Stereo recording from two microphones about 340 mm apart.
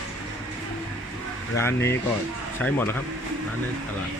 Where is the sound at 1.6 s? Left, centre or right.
Centre.